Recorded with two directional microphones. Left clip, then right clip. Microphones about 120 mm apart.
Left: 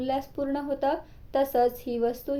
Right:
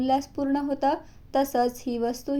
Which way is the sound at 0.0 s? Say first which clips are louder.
Right 4 dB; 40° right (ahead or behind).